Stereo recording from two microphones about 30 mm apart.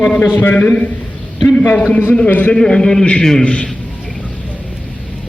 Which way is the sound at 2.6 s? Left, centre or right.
Left.